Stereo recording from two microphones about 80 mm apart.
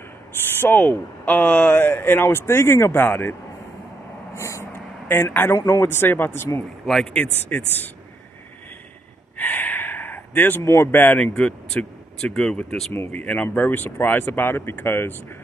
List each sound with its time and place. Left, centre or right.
0.6 s speech: left
4.4 s vehicle: left
5.0 s speech: left
6.8 s speech: centre
7.2 s speech: left
9.4 s gasp: left
10.6 s speech: left
10.9 s speech: left
11.3 s speech: centre
13.1 s speech: centre